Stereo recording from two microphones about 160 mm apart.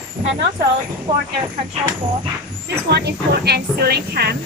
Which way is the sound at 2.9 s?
90° right.